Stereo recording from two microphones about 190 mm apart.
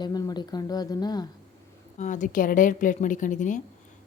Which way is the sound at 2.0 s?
40° left (ahead or behind).